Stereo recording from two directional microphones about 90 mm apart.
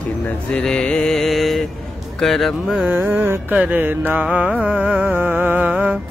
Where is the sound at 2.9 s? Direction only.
20° right (ahead or behind).